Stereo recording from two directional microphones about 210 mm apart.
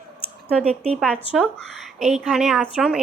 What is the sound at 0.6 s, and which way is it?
Speech, 30° right (ahead or behind).